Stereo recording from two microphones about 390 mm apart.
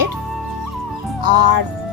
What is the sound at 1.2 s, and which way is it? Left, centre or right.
Speech, right.